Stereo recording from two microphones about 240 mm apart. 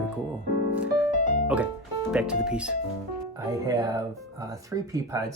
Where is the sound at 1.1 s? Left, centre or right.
Left.